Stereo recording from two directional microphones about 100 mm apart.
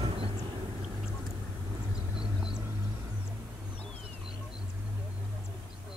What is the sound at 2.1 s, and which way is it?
Vehicle, 5° right (ahead or behind).